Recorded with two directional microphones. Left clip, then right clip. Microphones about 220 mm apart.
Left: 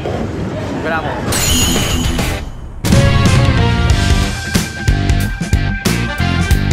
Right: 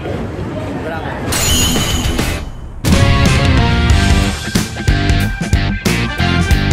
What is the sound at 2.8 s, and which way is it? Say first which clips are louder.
Music: even; centre (ahead or behind).